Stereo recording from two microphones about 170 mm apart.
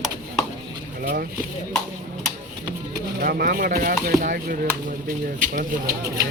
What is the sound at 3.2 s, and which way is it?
Speech, 60° right (ahead or behind).